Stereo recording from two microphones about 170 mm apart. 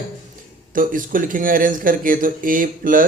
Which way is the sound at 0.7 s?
55° right (ahead or behind).